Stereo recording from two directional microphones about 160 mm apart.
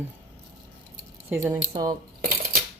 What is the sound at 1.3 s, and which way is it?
Speech, 10° right (ahead or behind).